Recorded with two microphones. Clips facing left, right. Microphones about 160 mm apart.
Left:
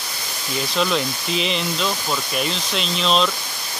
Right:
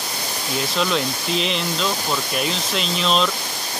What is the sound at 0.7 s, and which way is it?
Speech, centre (ahead or behind).